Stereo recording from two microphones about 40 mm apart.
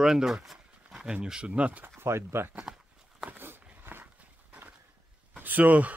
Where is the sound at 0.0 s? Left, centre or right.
Centre.